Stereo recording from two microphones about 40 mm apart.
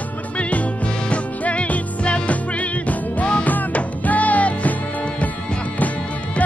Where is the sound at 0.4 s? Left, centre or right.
Left.